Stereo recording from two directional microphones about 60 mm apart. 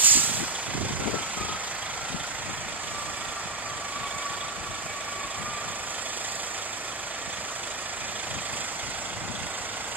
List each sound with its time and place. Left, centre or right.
0.0 s vehicle: right